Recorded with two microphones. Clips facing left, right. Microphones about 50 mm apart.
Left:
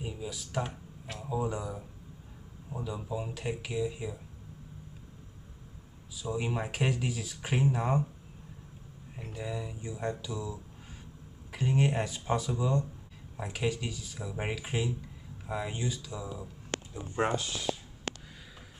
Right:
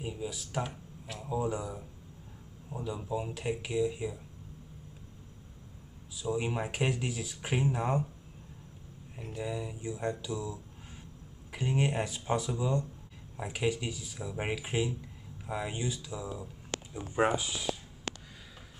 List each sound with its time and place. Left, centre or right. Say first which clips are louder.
0.0 s speech: right 1 dB; centre
2.8 s speech: right 1 dB; centre
6.2 s speech: right 1 dB; centre
9.1 s speech: right 1 dB; centre
16.7 s a sound: left 2 dB; left
17.1 s speech: right 2 dB; centre
18.1 s a sound: left 1 dB; left